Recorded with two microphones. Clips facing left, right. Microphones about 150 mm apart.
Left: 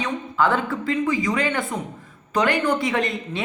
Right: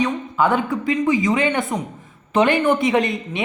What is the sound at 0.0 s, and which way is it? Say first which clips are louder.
A man's voice: right 3 dB; 15° right (ahead or behind).